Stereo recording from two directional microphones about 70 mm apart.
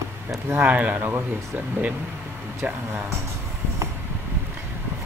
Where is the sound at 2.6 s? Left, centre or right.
Right.